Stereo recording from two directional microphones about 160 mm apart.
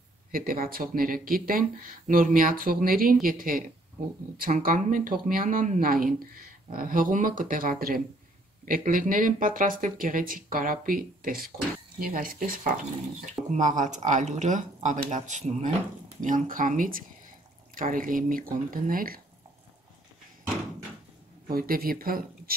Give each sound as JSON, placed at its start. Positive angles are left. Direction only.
{"t": 0.3, "sound": "speech", "side_deg": -60}
{"t": 21.5, "sound": "speech", "side_deg": -65}